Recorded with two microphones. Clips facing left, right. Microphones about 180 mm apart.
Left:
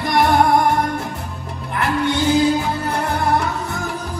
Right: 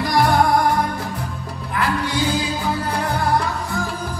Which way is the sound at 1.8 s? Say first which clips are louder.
Left 3 dB; 25° left (ahead or behind).